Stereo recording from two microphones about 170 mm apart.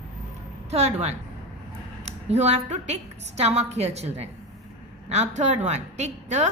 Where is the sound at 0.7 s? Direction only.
40° right (ahead or behind).